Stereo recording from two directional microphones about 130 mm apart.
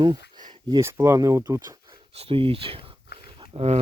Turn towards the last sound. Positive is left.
turn(degrees=-45)  # may be behind; listen again after turning